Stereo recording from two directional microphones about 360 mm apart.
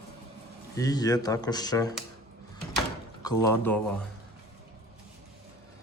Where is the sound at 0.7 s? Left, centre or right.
Centre.